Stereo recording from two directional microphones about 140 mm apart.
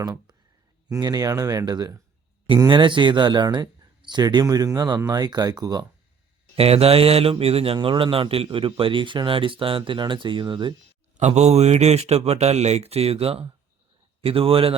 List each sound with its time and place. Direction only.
0.0 s speech: 30° right (ahead or behind)
6.6 s a man's voice: 45° right (ahead or behind)
11.2 s a man's voice: 50° right (ahead or behind)